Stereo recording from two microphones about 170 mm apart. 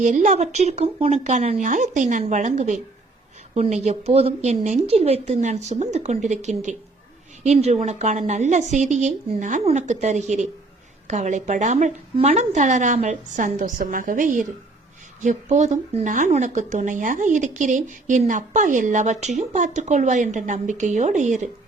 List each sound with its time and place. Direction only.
0.0 s speech: 45° right (ahead or behind)